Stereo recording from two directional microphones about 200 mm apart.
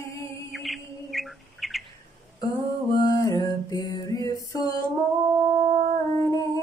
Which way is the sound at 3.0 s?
20° left (ahead or behind).